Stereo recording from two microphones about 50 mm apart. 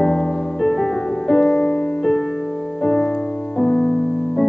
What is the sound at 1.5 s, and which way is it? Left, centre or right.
Music, centre.